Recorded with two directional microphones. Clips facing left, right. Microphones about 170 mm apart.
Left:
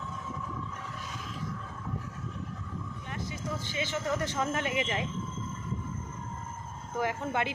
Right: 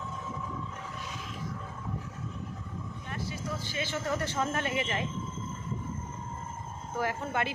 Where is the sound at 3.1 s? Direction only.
20° left (ahead or behind).